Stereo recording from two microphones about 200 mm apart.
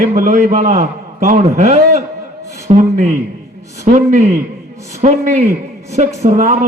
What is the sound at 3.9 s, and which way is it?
A man's voice, 35° right (ahead or behind).